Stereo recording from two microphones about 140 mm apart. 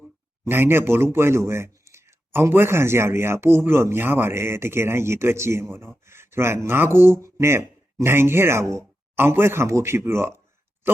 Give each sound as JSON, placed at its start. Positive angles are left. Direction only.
{"t": 0.4, "sound": "speech", "side_deg": -15}